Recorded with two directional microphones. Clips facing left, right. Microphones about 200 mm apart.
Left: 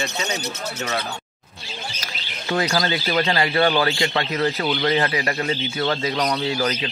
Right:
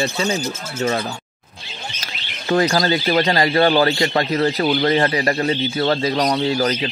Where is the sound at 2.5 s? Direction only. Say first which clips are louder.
Right 5 dB; 45° right (ahead or behind).